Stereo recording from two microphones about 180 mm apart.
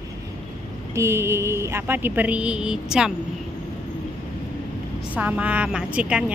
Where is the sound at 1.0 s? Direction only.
15° right (ahead or behind).